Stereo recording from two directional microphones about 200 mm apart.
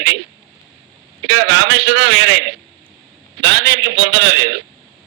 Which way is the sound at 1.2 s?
65° right (ahead or behind).